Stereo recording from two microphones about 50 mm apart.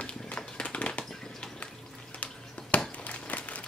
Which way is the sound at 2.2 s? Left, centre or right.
Left.